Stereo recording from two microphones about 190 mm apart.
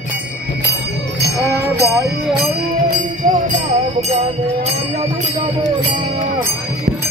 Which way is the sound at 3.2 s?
25° right (ahead or behind).